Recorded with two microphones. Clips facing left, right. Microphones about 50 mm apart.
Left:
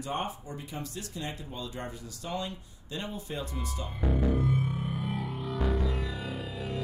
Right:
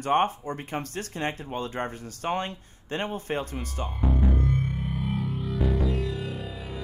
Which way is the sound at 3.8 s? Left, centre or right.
Centre.